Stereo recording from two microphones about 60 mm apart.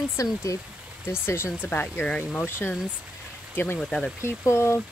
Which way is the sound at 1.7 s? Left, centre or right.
Left.